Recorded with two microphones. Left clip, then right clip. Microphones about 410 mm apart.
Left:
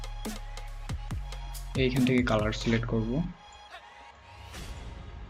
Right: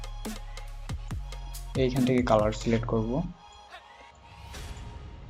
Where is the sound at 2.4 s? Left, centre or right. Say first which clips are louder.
Right 2 dB; centre.